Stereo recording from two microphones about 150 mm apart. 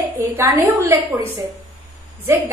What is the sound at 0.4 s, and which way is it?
A woman's voice, 15° right (ahead or behind).